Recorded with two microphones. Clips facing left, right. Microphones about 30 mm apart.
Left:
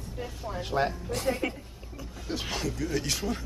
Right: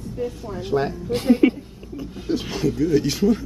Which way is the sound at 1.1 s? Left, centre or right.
Right.